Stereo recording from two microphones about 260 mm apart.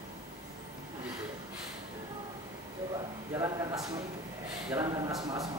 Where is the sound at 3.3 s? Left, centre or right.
Centre.